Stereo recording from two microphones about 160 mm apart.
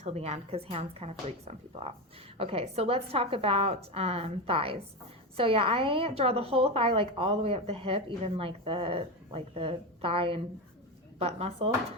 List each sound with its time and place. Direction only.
0.0 s a woman's voice: 45° right (ahead or behind)